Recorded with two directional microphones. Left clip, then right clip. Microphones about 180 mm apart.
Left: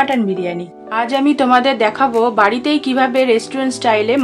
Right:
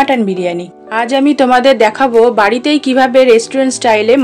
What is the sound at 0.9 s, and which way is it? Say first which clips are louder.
A woman's voice: right 4 dB; 25° right (ahead or behind).